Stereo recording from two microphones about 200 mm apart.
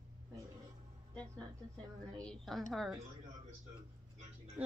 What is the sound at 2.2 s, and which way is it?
Speech, centre (ahead or behind).